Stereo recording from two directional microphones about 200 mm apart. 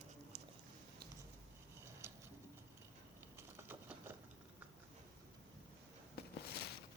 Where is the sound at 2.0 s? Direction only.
15° right (ahead or behind).